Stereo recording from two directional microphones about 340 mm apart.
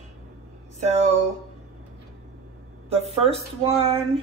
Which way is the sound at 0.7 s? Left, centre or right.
Centre.